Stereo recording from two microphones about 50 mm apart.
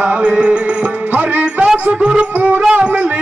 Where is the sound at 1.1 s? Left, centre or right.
Right.